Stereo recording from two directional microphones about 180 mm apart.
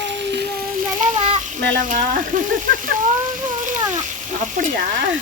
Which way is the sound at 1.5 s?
45° right (ahead or behind).